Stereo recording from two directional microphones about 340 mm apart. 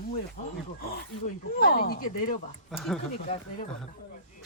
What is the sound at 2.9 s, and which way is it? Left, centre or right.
Speech, centre.